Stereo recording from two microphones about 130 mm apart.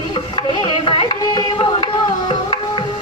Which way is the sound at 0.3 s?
40° left (ahead or behind).